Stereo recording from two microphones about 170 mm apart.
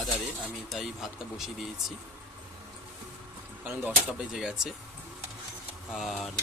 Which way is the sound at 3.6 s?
10° right (ahead or behind).